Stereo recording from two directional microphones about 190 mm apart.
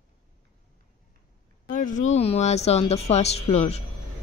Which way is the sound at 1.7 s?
40° left (ahead or behind).